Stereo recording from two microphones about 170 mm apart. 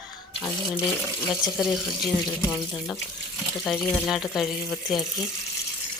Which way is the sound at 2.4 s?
20° left (ahead or behind).